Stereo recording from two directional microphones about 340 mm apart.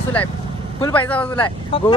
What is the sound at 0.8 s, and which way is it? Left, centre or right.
Speech, centre.